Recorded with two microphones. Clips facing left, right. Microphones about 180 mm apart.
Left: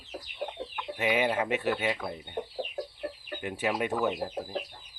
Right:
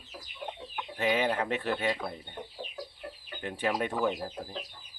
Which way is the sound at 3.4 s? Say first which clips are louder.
Left 1 dB; 10° left (ahead or behind).